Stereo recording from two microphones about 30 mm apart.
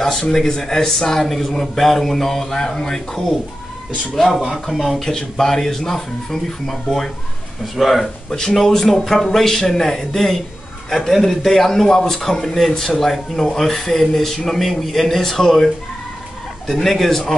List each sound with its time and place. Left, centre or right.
0.3 s speech: centre
4.4 s speech: centre
4.9 s speech: centre
8.3 s speech: left
16.7 s speech: centre